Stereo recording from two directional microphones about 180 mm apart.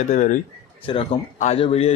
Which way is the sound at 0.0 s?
45° left (ahead or behind).